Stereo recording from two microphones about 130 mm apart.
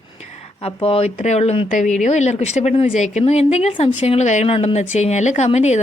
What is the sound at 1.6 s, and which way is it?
Speech, 70° left (ahead or behind).